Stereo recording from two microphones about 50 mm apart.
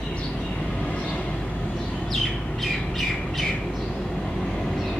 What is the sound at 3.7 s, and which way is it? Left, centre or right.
Vehicle, centre.